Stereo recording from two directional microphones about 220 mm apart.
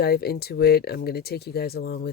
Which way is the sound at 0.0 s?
45° left (ahead or behind).